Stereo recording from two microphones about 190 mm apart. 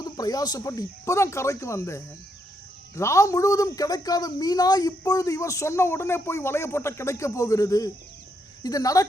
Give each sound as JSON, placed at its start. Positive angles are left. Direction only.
{"t": 0.0, "sound": "speech", "side_deg": 20}